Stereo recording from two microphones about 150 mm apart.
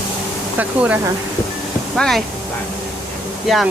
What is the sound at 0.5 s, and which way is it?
Speech, 10° right (ahead or behind).